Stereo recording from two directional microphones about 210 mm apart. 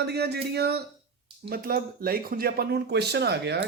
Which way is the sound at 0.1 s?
50° right (ahead or behind).